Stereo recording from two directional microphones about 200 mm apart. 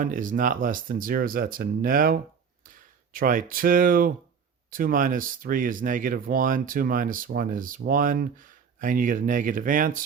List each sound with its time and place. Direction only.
0.0 s speech: 40° right (ahead or behind)